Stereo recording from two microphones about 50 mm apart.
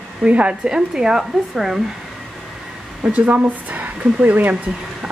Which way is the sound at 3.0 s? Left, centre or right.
Right.